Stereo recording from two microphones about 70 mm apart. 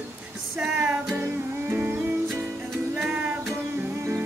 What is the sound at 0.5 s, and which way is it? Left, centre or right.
Music, centre.